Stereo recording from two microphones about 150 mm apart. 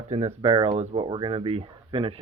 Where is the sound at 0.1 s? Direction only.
45° right (ahead or behind).